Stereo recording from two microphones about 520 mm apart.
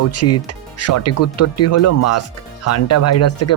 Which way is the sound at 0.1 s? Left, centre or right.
Left.